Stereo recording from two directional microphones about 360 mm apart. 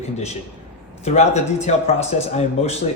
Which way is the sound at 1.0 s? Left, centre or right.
Centre.